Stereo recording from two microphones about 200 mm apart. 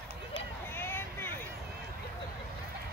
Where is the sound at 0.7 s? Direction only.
10° left (ahead or behind).